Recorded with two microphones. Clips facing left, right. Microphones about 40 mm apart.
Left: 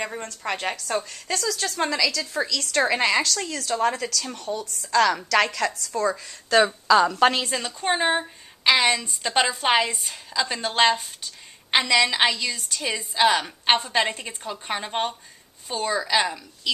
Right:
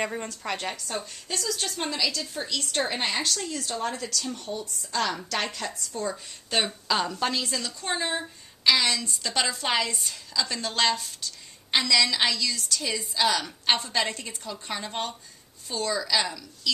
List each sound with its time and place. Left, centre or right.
0.4 s a woman's voice: centre
0.8 s a woman's voice: left
7.1 s a woman's voice: left
7.3 s a woman's voice: left